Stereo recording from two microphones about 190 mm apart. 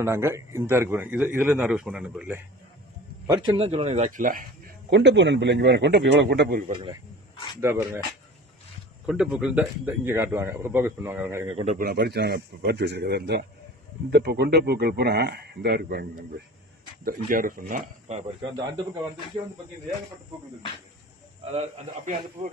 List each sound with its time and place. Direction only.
0.0 s a man's voice: 15° right (ahead or behind)
3.3 s speech: 25° right (ahead or behind); by 4.9 s 45° right (ahead or behind)
4.9 s speech: 70° right (ahead or behind)
7.6 s a man's voice: 15° right (ahead or behind)
9.0 s a man's voice: 5° right (ahead or behind)
11.4 s speech: 35° right (ahead or behind)
21.5 s a man's voice: 40° right (ahead or behind)